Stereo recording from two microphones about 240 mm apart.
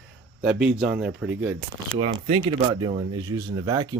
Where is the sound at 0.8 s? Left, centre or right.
Centre.